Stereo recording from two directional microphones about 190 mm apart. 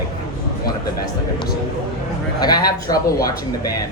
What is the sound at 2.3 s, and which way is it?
Speech, 20° left (ahead or behind).